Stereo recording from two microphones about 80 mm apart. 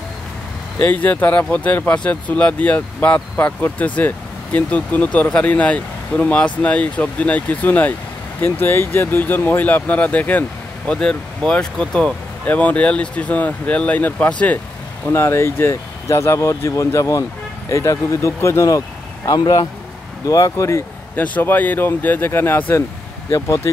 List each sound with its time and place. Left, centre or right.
0.7 s speech: centre
10.9 s speech: centre; by 18.8 s left
20.2 s speech: left
21.2 s speech: left